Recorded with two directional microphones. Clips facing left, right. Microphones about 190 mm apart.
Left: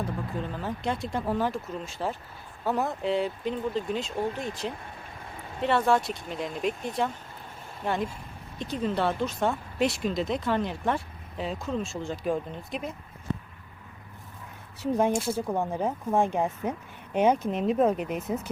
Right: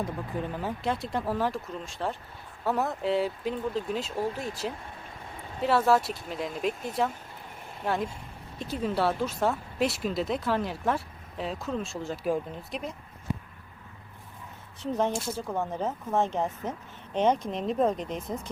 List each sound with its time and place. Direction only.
0.0 s speech: 15° right (ahead or behind)
0.8 s speech: centre (ahead or behind)
8.5 s speech: 5° right (ahead or behind)
14.8 s speech: 10° left (ahead or behind)